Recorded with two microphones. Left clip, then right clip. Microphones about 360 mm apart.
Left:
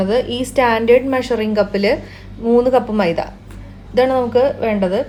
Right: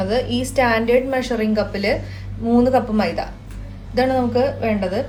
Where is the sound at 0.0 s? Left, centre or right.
Left.